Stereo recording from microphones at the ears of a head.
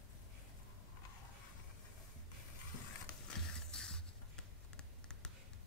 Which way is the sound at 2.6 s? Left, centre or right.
Left.